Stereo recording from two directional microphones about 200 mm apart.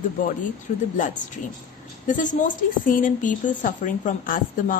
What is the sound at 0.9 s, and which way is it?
A woman's voice, 40° left (ahead or behind).